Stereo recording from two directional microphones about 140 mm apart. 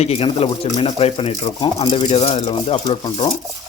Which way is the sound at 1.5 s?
35° left (ahead or behind).